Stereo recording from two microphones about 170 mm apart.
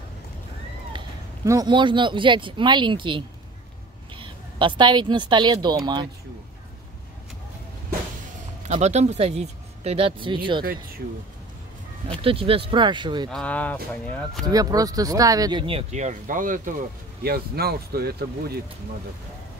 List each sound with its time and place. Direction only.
0.9 s a man's voice: 20° right (ahead or behind)
8.6 s speech: 40° right (ahead or behind)
10.6 s speech: 60° right (ahead or behind)
12.1 s speech: 35° right (ahead or behind)
13.3 s speech: 5° left (ahead or behind)
14.4 s speech: 20° right (ahead or behind); by 16.7 s 50° right (ahead or behind)
17.2 s speech: 65° right (ahead or behind)